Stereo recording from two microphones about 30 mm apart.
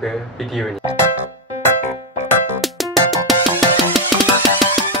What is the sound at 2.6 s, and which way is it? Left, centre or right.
Music, centre.